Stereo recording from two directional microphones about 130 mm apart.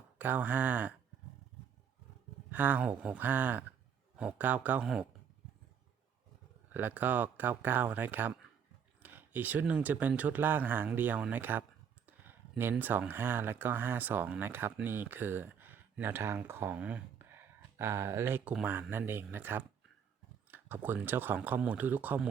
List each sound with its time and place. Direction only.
0.2 s speech: 15° right (ahead or behind)
2.5 s speech: 15° right (ahead or behind)
6.7 s speech: 15° right (ahead or behind)
12.0 s a sound: 15° right (ahead or behind)
12.8 s speech: 15° right (ahead or behind)